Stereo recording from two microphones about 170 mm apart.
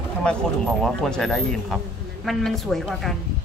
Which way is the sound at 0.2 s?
5° left (ahead or behind).